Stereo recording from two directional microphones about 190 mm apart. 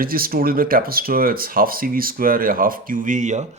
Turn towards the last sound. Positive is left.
turn(degrees=-40)  # may be behind; listen again after turning